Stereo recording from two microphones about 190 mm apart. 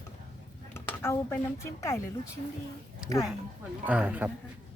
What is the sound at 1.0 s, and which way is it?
Speech, 15° left (ahead or behind).